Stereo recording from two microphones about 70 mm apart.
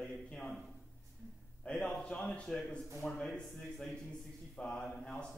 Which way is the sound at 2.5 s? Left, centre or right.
Centre.